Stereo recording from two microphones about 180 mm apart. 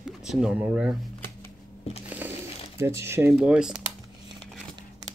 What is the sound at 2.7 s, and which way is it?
Speech, 15° right (ahead or behind).